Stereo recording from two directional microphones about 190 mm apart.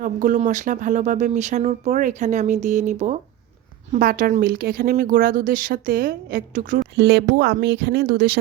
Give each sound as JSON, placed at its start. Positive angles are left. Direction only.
{"t": 0.0, "sound": "speech", "side_deg": -45}
{"t": 3.9, "sound": "speech", "side_deg": -50}